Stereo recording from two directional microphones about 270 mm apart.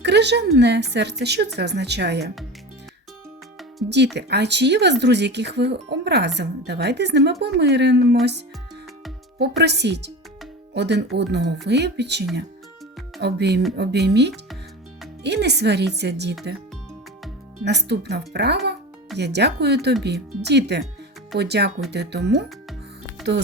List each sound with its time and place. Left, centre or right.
0.0 s speech: right
3.8 s speech: right
9.4 s speech: right
17.7 s speech: right
23.2 s music: centre